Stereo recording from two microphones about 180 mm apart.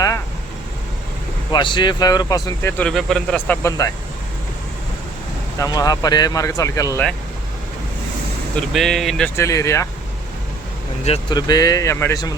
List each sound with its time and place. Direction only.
1.5 s speech: 25° left (ahead or behind)
5.5 s speech: 20° left (ahead or behind)
8.7 s speech: centre (ahead or behind)
9.3 s speech: 15° left (ahead or behind)
11.0 s speech: 30° left (ahead or behind)